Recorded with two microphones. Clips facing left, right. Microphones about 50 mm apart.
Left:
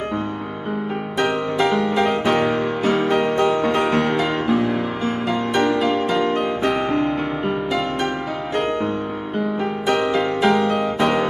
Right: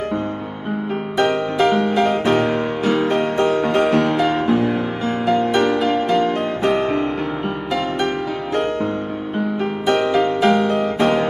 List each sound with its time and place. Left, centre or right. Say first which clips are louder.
2.8 s music: even; left
4.3 s music: right 2 dB; right
10.4 s music: even; right